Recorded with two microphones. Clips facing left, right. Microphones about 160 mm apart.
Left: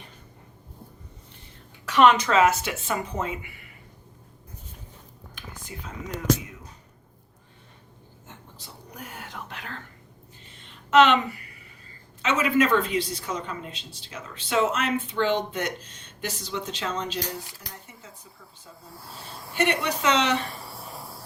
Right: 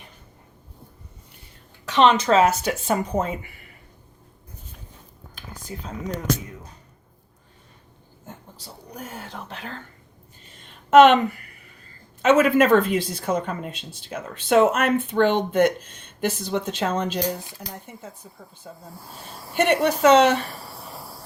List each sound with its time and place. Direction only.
1.8 s speech: 25° right (ahead or behind); by 3.5 s 40° right (ahead or behind)
5.7 s speech: 30° right (ahead or behind)
8.3 s whispering: 35° right (ahead or behind)
10.9 s a woman's voice: 50° right (ahead or behind)
12.2 s a woman's voice: 50° right (ahead or behind)
18.9 s speech: 15° right (ahead or behind)
19.5 s a woman's voice: 50° right (ahead or behind)
20.7 s cricket: centre (ahead or behind)